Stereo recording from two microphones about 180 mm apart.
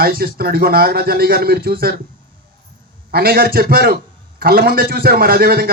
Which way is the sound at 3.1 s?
60° right (ahead or behind).